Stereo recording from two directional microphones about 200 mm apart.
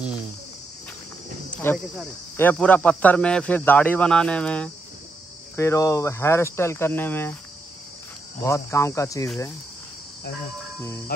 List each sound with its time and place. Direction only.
1.5 s speech: 10° left (ahead or behind)
8.4 s speech: 15° left (ahead or behind)
11.1 s cricket: 50° left (ahead or behind)